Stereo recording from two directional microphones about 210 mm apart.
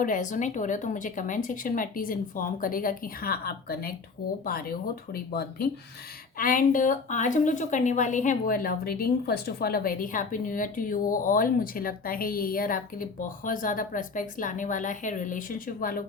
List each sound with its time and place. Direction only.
0.0 s speech: 40° left (ahead or behind)